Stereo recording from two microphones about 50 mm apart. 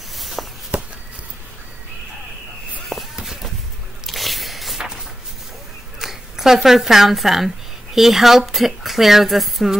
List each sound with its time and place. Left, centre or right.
0.2 s walk: centre
0.7 s walk: right
2.9 s a sound: centre
5.9 s speech: centre